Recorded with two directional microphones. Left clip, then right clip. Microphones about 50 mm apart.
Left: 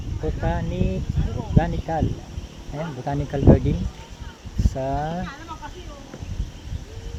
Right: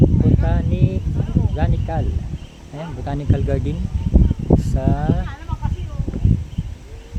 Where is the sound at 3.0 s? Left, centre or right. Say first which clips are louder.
Right 3 dB; right.